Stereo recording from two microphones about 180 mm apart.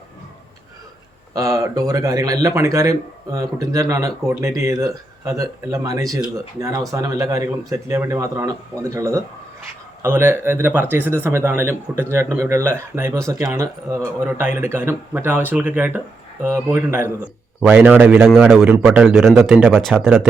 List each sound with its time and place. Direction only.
1.3 s a man's voice: 20° right (ahead or behind)
19.8 s a man's voice: centre (ahead or behind)